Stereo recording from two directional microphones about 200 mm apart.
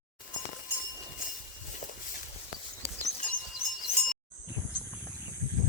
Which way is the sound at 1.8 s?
40° left (ahead or behind).